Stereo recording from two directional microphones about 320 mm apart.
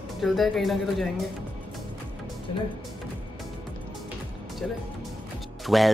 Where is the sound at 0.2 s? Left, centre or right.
Centre.